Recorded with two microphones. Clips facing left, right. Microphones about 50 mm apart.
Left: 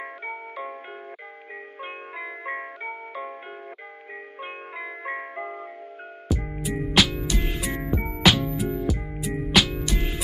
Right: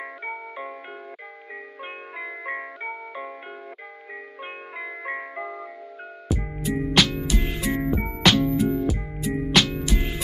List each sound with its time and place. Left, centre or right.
0.0 s music: centre
1.8 s music: centre
4.7 s music: centre
5.4 s music: left
6.6 s music: centre